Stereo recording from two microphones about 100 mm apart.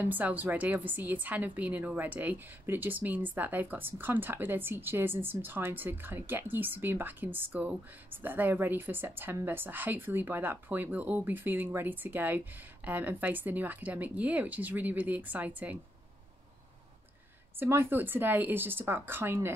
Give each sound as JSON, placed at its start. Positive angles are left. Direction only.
{"t": 0.0, "sound": "a woman's voice", "side_deg": -15}
{"t": 17.6, "sound": "a woman's voice", "side_deg": -25}